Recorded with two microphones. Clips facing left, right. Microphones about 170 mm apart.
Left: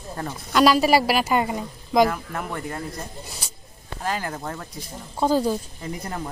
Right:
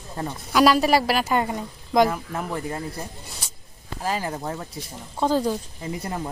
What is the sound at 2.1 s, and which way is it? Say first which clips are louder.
Speech: right 1 dB; 20° right (ahead or behind).